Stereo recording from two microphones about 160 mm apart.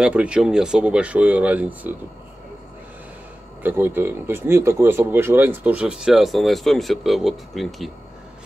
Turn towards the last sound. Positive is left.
turn(degrees=0)  # may be behind; listen again after turning